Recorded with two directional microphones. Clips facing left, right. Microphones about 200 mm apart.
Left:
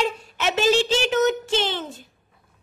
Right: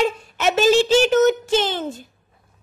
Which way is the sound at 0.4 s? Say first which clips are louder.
Right 4 dB; 45° right (ahead or behind).